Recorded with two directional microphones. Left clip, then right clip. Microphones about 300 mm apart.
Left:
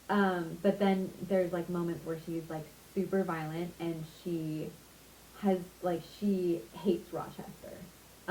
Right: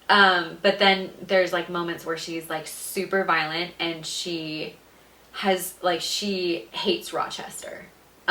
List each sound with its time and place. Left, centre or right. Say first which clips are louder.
0.1 s speech: right 14 dB; centre
4.4 s speech: right 7 dB; right
5.4 s speech: right 9 dB; centre